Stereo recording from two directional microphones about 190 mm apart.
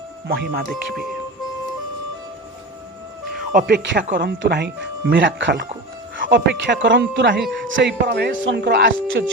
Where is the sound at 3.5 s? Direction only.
60° right (ahead or behind).